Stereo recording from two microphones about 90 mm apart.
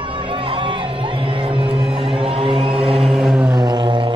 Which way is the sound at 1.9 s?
90° right.